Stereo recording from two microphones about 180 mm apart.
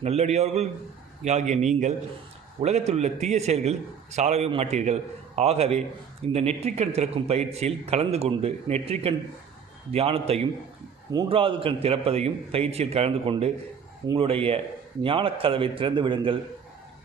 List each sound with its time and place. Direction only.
0.0 s a man's voice: 40° right (ahead or behind)